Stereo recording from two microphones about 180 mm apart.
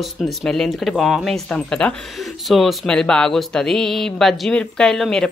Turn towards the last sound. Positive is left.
turn(degrees=0)  # may be behind; listen again after turning